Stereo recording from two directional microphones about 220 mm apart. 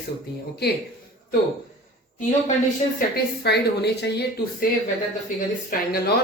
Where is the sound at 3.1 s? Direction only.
50° left (ahead or behind).